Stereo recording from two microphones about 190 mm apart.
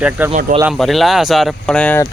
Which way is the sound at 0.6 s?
Centre (ahead or behind).